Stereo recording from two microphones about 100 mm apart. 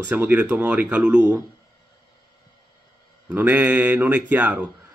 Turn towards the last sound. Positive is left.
turn(degrees=-15)  # may be behind; listen again after turning